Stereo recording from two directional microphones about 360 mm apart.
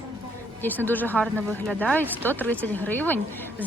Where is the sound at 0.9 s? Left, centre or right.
Centre.